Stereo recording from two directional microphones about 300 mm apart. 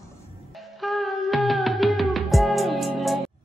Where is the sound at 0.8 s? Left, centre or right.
Centre.